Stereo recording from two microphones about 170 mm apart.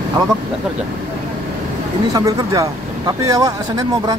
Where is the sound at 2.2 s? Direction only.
20° right (ahead or behind).